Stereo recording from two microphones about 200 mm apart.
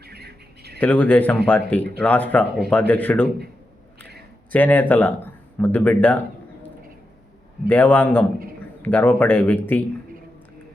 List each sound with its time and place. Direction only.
0.0 s bird: 55° right (ahead or behind)
0.8 s speech: 10° left (ahead or behind)
4.5 s speech: 10° left (ahead or behind)
7.7 s speech: 10° left (ahead or behind)